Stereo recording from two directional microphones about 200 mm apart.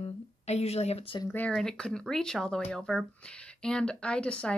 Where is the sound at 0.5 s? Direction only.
30° left (ahead or behind).